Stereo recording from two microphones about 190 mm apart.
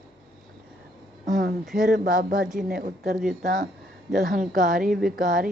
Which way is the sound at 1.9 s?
45° right (ahead or behind).